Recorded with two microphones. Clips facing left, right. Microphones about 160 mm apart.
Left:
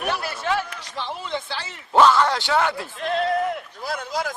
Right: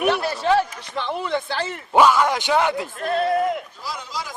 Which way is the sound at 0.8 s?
55° right (ahead or behind).